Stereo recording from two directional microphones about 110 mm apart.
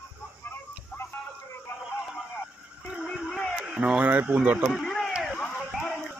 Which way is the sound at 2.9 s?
Centre (ahead or behind).